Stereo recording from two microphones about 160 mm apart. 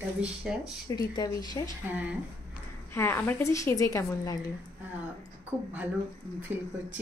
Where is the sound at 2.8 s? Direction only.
15° left (ahead or behind).